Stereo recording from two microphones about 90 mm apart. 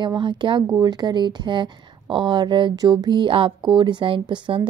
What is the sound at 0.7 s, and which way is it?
Speech, 50° right (ahead or behind).